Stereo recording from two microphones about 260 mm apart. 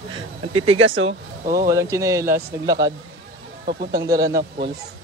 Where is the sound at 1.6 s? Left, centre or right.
Centre.